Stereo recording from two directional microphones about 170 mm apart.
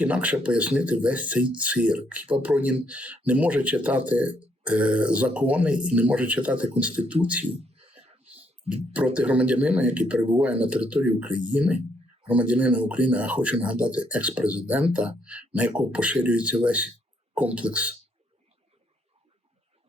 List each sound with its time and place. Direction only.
0.0 s speech: 10° right (ahead or behind)
7.4 s a sound: 35° right (ahead or behind)
8.7 s speech: 10° right (ahead or behind)